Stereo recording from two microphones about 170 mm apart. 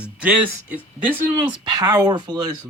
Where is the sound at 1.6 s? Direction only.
25° right (ahead or behind).